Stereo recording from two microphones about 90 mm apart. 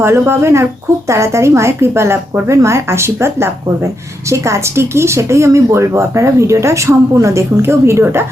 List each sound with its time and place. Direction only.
0.0 s speech: 30° right (ahead or behind)